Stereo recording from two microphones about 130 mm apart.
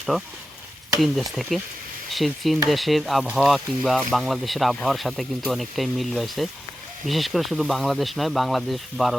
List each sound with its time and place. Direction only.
0.9 s speech: centre (ahead or behind)